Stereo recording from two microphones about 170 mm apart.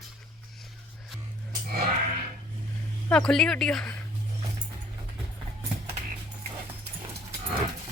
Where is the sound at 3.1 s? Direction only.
5° left (ahead or behind).